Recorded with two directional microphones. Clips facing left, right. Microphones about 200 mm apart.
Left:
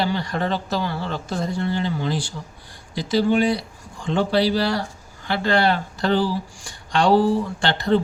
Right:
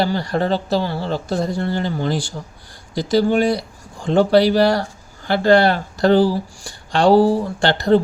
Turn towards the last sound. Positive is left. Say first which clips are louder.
# right 5 dB
turn(degrees=-40)  # may be behind; listen again after turning